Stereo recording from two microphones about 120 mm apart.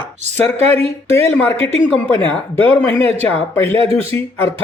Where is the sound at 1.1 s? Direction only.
20° left (ahead or behind).